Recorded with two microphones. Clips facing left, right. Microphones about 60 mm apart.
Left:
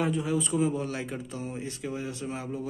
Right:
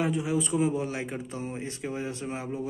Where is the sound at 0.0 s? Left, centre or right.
Centre.